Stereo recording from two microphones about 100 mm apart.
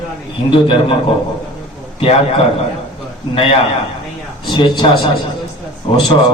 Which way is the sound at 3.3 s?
65° left (ahead or behind).